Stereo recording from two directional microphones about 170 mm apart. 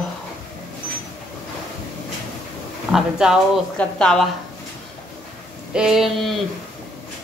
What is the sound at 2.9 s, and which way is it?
Speech, 5° right (ahead or behind).